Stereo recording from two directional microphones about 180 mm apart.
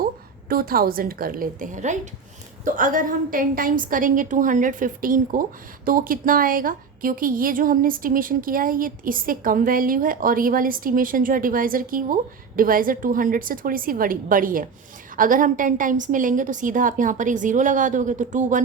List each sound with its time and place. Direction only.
0.4 s a woman's voice: 55° right (ahead or behind)